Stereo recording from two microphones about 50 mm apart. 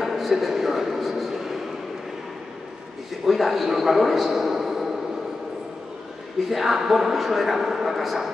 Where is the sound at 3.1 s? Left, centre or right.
Centre.